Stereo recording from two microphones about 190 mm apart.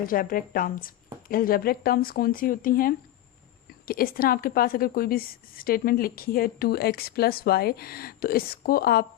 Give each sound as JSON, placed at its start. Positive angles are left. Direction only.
{"t": 0.0, "sound": "a woman's voice", "side_deg": 50}